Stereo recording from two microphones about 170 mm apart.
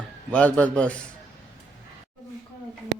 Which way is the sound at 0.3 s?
10° left (ahead or behind).